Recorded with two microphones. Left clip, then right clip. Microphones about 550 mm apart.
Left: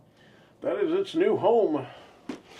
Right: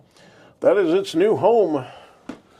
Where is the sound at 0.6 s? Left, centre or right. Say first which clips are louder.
Right 9 dB; right.